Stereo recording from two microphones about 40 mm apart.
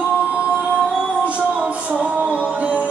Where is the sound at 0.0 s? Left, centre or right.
Right.